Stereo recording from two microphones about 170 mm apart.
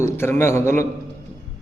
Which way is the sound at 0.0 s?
15° left (ahead or behind).